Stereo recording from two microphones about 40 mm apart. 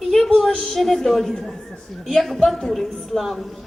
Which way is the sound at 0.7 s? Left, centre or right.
Centre.